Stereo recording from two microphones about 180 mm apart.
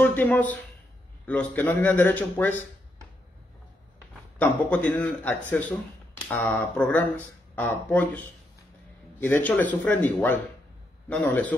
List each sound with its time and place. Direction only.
0.0 s a man's voice: 10° left (ahead or behind)
4.4 s a man's voice: 10° left (ahead or behind)
9.2 s a man's voice: 10° left (ahead or behind)